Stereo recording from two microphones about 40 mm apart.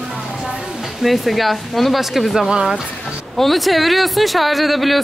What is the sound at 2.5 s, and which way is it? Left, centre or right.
Speech, centre.